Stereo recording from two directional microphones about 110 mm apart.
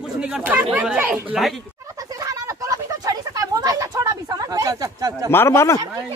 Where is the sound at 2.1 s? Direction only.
30° right (ahead or behind).